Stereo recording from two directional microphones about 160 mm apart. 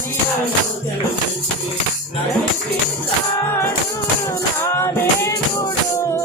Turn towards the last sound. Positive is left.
turn(degrees=15)  # may be behind; listen again after turning